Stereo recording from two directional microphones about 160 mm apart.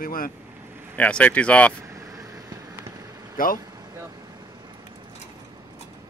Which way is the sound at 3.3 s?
60° left (ahead or behind).